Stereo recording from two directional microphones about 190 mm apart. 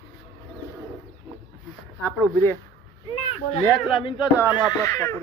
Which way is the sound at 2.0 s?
10° left (ahead or behind).